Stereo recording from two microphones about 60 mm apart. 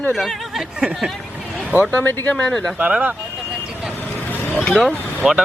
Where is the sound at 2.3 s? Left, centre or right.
Centre.